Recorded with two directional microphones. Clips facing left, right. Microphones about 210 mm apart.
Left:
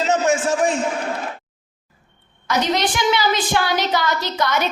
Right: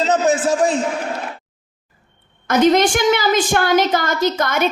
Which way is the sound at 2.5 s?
45° right (ahead or behind).